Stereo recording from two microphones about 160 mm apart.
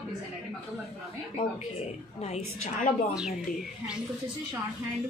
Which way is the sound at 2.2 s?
45° left (ahead or behind).